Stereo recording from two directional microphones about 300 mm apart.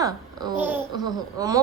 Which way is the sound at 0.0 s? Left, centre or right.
Centre.